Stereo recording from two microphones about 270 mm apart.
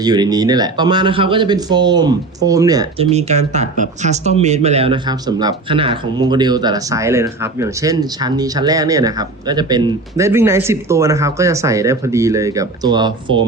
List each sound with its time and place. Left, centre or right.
0.0 s speech: centre